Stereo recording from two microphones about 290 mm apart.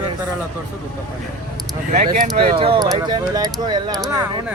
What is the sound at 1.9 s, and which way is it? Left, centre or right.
Speech, right.